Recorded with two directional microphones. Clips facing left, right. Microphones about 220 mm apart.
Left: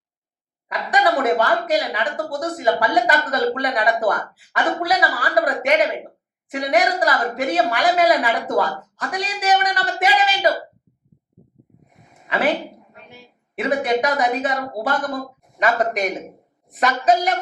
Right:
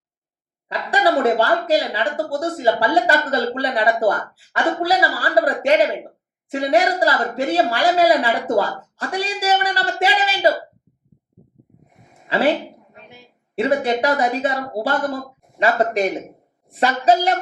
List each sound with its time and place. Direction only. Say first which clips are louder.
0.7 s speech: right 1 dB; 30° right (ahead or behind)
12.3 s speech: right 3 dB; 30° right (ahead or behind)
13.6 s speech: right 1 dB; 30° right (ahead or behind)